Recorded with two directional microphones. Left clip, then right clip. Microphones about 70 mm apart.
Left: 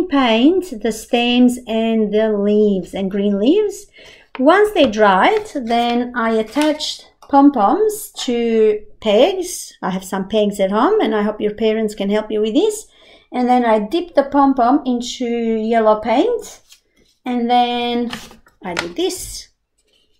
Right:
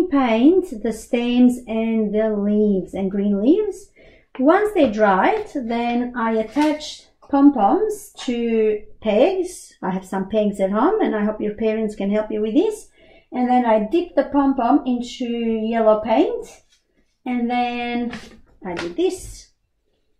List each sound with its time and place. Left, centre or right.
0.1 s a woman's voice: left